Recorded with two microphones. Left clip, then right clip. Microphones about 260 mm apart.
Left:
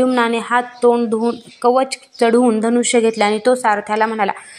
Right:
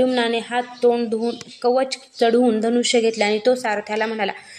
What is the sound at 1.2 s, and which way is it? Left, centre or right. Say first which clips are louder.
Speech: left 5 dB; left.